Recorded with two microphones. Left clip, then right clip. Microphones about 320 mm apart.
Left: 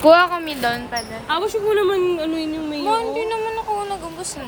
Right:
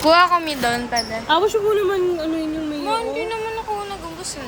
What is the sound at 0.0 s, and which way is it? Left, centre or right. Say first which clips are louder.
Speech: left 1 dB; centre.